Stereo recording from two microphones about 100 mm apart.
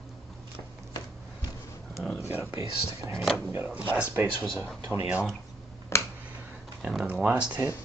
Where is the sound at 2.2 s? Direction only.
20° right (ahead or behind).